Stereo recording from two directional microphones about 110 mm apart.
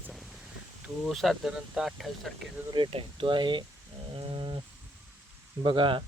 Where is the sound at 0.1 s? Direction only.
Centre (ahead or behind).